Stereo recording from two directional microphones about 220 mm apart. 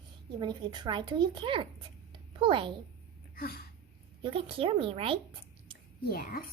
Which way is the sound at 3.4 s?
45° left (ahead or behind).